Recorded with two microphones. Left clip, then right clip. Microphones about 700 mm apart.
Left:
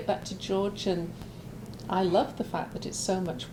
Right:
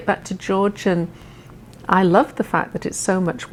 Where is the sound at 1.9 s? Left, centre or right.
Right.